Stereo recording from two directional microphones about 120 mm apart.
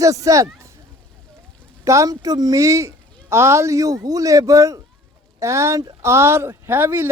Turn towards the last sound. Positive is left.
turn(degrees=-15)  # may be behind; listen again after turning